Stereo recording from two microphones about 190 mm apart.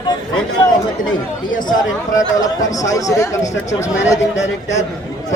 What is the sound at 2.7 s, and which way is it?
Speech, 15° left (ahead or behind).